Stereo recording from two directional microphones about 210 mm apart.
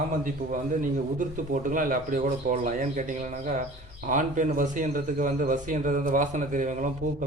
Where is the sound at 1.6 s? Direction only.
40° right (ahead or behind).